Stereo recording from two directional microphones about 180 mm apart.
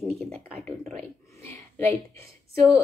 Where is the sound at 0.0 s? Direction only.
5° left (ahead or behind).